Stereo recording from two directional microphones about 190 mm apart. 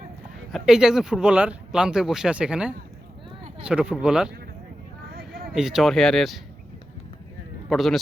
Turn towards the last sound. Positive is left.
turn(degrees=0)  # may be behind; listen again after turning